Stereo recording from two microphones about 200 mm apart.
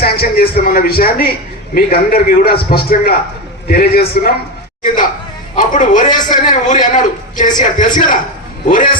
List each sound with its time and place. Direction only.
0.0 s a man's voice: 50° left (ahead or behind)
5.5 s a man's voice: 40° left (ahead or behind)